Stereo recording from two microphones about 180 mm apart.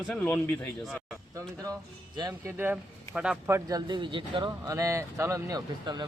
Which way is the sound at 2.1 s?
20° right (ahead or behind).